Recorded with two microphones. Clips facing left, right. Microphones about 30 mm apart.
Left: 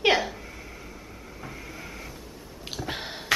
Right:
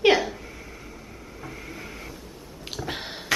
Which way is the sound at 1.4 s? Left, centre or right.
Centre.